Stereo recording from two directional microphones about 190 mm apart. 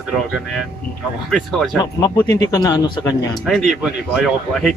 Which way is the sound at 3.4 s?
Centre (ahead or behind).